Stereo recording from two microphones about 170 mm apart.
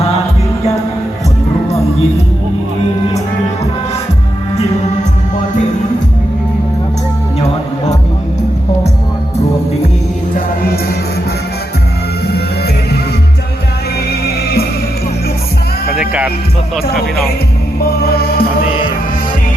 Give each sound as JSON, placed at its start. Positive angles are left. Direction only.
{"t": 14.1, "sound": "music", "side_deg": 70}
{"t": 16.0, "sound": "music", "side_deg": -5}
{"t": 17.7, "sound": "music", "side_deg": 65}